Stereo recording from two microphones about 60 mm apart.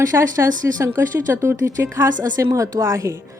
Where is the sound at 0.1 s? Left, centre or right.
Right.